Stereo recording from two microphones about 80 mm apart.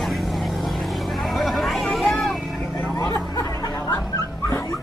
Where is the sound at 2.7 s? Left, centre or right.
Left.